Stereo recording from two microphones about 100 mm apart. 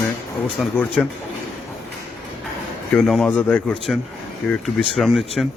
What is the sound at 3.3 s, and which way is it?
Speech, 15° left (ahead or behind).